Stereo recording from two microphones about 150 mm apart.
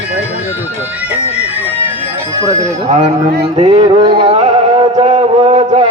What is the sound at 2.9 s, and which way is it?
Speech, 45° right (ahead or behind).